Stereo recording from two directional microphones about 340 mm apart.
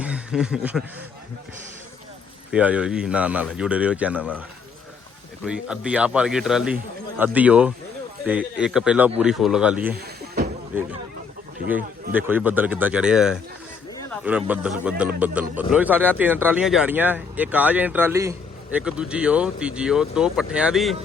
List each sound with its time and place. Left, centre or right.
0.0 s speech: centre
2.5 s speech: centre
5.5 s speech: centre
9.9 s a sound: right
10.7 s speech: centre
12.1 s speech: centre